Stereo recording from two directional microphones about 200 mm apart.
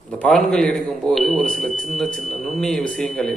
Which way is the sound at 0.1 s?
5° left (ahead or behind).